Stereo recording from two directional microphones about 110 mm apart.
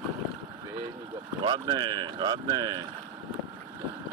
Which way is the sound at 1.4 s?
45° right (ahead or behind).